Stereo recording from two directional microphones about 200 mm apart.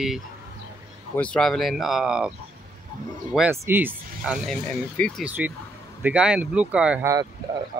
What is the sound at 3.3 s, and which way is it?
Speech, 10° right (ahead or behind).